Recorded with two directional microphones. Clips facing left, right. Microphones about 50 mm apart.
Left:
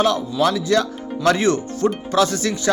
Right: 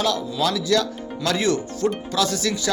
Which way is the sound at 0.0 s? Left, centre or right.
Left.